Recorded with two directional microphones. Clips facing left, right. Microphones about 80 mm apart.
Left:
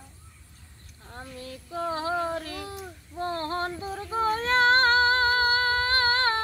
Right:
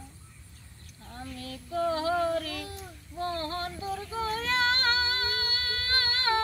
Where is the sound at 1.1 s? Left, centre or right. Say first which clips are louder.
Even; left.